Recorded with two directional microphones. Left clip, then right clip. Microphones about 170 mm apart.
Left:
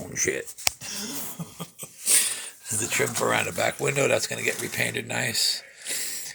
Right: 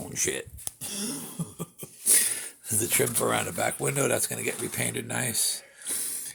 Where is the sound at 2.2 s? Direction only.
40° right (ahead or behind); by 5.5 s 20° right (ahead or behind).